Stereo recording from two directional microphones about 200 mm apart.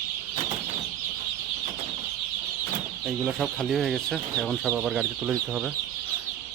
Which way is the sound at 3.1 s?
Centre (ahead or behind).